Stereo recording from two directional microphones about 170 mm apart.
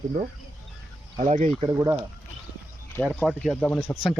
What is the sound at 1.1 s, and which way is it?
Speech, 40° right (ahead or behind).